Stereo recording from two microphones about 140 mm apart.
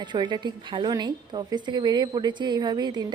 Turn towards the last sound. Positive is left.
turn(degrees=-30)  # may be behind; listen again after turning